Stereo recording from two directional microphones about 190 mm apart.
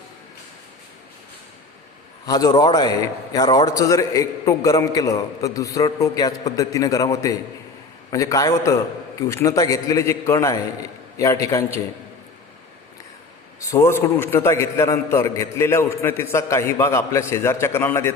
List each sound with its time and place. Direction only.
2.2 s a man's voice: 20° left (ahead or behind)
13.6 s a man's voice: 15° left (ahead or behind)